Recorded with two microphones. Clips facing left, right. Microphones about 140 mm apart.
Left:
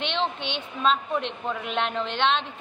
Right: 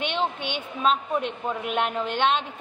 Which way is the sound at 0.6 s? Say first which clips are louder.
Even; 5° right (ahead or behind).